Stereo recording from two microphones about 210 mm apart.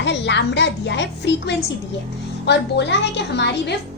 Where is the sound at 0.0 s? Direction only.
55° left (ahead or behind).